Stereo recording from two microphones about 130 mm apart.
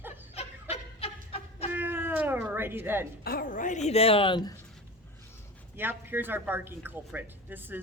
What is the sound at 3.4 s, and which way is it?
Speech, 85° left.